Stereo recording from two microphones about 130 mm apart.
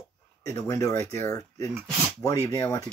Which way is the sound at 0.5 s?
25° left (ahead or behind).